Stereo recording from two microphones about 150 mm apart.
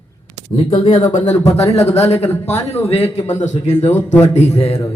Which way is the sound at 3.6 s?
45° left (ahead or behind).